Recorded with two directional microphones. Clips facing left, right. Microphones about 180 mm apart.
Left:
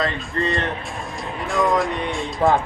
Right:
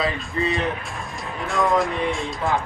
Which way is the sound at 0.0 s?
Centre (ahead or behind).